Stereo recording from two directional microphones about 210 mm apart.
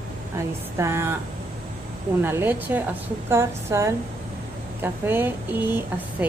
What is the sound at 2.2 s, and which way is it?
A woman's voice, 10° right (ahead or behind).